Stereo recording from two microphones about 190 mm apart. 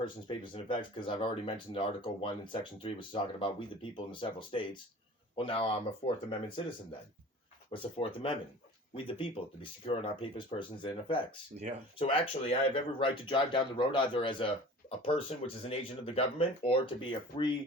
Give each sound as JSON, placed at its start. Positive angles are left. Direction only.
{"t": 0.0, "sound": "speech", "side_deg": 25}
{"t": 7.7, "sound": "speech", "side_deg": 30}